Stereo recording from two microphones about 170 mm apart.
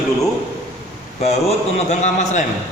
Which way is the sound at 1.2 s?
40° left (ahead or behind).